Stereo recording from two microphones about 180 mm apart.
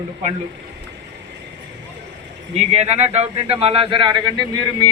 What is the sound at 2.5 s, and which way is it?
A man's voice, 35° right (ahead or behind).